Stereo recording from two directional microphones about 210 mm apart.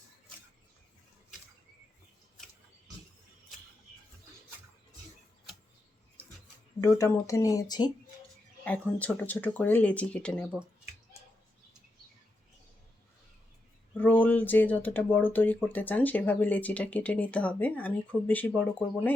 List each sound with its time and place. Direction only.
6.8 s speech: 15° left (ahead or behind)
8.6 s speech: 5° left (ahead or behind)
13.9 s speech: 5° left (ahead or behind)